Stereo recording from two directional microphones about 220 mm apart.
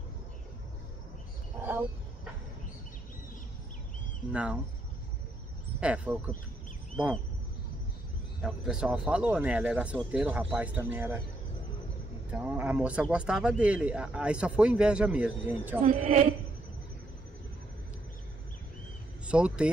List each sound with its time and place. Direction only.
1.6 s a sound: 10° right (ahead or behind)
4.3 s speech: 5° right (ahead or behind)
5.8 s speech: 5° right (ahead or behind)
8.4 s speech: 5° right (ahead or behind)
12.3 s speech: 5° right (ahead or behind)
15.8 s speech: 30° right (ahead or behind)
19.2 s speech: 5° right (ahead or behind)